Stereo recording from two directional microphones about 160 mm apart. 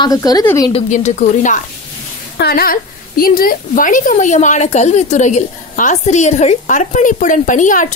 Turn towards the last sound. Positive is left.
turn(degrees=55)  # may be behind; listen again after turning